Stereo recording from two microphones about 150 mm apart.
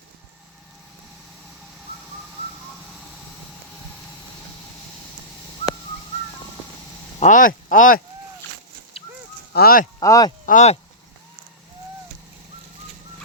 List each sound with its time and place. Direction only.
7.2 s speech: 60° left (ahead or behind)
9.5 s speech: 85° left
10.0 s speech: 25° left (ahead or behind)
10.4 s speech: 55° left (ahead or behind)